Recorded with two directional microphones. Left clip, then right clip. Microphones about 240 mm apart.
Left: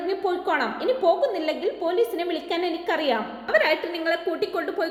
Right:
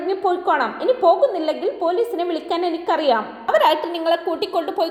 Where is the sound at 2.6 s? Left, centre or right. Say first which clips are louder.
Right 6 dB; right.